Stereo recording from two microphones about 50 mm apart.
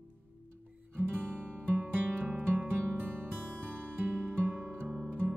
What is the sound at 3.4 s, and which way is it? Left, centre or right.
Music, right.